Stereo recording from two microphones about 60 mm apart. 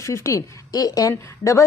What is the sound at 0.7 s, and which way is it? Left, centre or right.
Speech, left.